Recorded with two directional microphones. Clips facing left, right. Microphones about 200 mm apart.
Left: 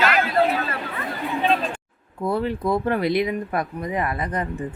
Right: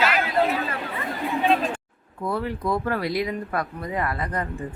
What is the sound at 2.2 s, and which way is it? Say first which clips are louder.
Speech: left 4 dB; 25° left (ahead or behind).